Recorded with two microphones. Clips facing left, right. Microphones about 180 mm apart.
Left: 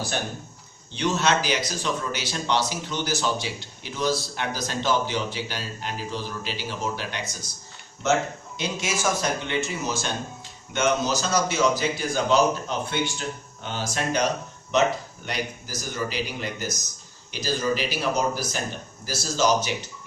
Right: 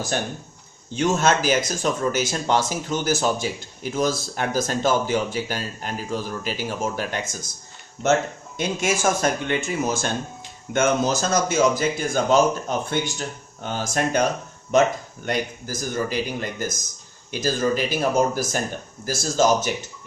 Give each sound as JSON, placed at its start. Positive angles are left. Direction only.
{"t": 0.9, "sound": "speech", "side_deg": -45}
{"t": 8.5, "sound": "speech", "side_deg": -50}